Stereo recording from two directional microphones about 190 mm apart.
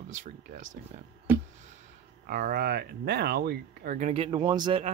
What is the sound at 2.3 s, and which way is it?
Speech, 50° right (ahead or behind).